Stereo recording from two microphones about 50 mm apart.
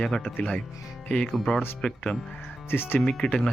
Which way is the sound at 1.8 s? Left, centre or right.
Centre.